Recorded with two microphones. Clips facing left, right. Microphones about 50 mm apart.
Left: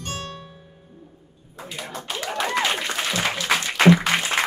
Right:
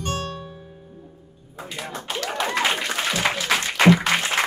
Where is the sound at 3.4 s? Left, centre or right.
Centre.